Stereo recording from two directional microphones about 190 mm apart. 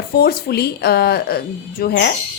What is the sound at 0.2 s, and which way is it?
A woman's voice, 55° left (ahead or behind).